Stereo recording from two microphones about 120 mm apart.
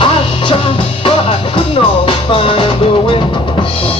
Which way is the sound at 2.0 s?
50° left (ahead or behind).